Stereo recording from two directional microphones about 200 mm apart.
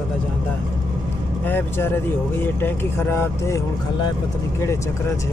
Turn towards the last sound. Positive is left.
turn(degrees=10)  # may be behind; listen again after turning